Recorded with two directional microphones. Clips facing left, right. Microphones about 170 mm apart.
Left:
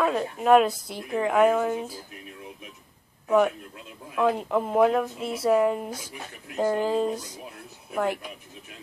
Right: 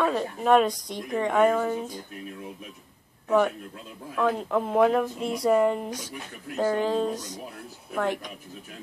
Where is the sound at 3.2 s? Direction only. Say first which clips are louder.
Left 1 dB; 5° left (ahead or behind).